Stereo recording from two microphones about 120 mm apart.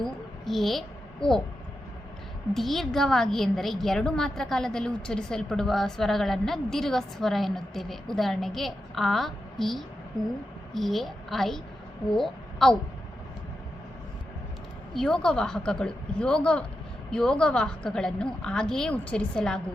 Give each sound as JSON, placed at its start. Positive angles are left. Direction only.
{"t": 0.0, "sound": "a sound", "side_deg": 0}
{"t": 2.5, "sound": "a woman's voice", "side_deg": 0}
{"t": 14.9, "sound": "a woman's voice", "side_deg": 5}